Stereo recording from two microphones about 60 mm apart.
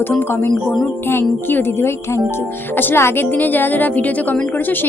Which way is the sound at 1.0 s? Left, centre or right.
Left.